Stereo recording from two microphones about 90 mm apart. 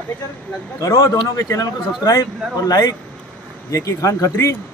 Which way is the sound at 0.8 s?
40° left (ahead or behind).